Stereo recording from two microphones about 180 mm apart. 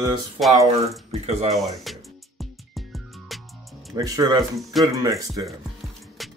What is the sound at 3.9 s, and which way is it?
Speech, 20° right (ahead or behind).